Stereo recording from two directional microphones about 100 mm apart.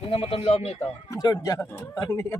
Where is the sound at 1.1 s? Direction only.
40° left (ahead or behind).